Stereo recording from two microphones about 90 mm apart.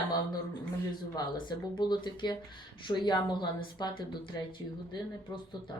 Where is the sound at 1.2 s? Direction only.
55° left (ahead or behind).